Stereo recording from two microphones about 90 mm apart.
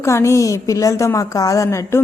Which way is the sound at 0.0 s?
30° left (ahead or behind).